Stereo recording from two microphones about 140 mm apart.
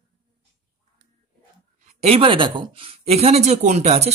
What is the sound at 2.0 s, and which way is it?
Speech, 40° right (ahead or behind).